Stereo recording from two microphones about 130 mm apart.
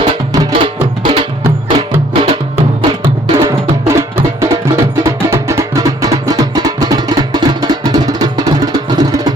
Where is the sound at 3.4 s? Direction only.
20° right (ahead or behind).